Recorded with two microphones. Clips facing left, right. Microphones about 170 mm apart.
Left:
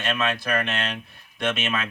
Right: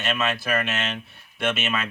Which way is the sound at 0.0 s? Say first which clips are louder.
Even; 5° right (ahead or behind).